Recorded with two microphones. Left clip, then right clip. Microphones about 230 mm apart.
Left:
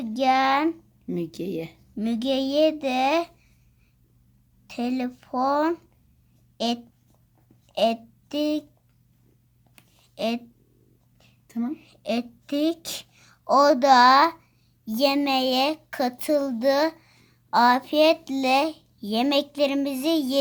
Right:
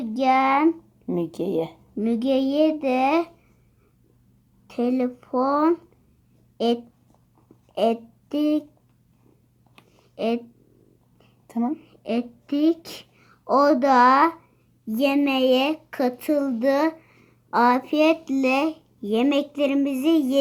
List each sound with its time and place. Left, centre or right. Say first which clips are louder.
0.0 s speech: right 1 dB; left
2.0 s speech: right 3 dB; left
4.6 s speech: right 5 dB; left
7.7 s speech: right 1 dB; left
10.2 s speech: right 2 dB; left
11.7 s a woman's voice: right 1 dB; left